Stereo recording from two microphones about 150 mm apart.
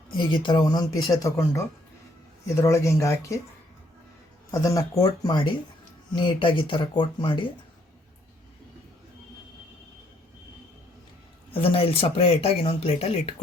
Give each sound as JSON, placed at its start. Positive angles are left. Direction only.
{"t": 0.2, "sound": "speech", "side_deg": 35}
{"t": 4.5, "sound": "speech", "side_deg": 25}
{"t": 11.5, "sound": "speech", "side_deg": 40}